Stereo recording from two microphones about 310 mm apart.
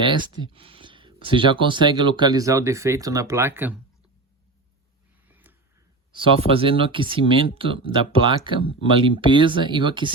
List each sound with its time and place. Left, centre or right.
0.0 s speech: centre
5.3 s a sound: centre
6.1 s speech: centre